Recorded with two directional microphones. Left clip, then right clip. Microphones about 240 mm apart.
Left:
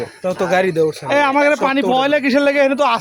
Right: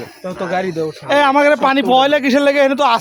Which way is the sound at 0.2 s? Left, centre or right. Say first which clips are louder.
Left 5 dB; left.